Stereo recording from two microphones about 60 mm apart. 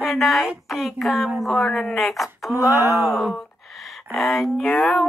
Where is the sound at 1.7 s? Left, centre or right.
Centre.